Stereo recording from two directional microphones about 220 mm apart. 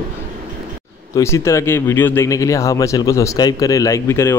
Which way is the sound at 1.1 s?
10° left (ahead or behind).